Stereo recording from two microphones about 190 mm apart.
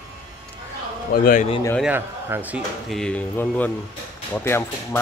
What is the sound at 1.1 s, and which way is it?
Speech, 45° left (ahead or behind).